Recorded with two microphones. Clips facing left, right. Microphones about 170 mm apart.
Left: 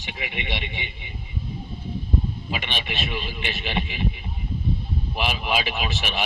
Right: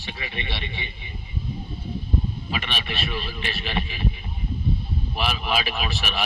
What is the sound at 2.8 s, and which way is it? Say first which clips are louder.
A man's voice: even; 15° left (ahead or behind).